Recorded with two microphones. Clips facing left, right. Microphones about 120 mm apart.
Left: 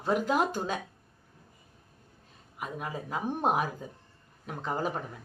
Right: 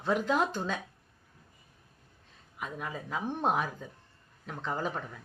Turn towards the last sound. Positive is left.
turn(degrees=10)  # may be behind; listen again after turning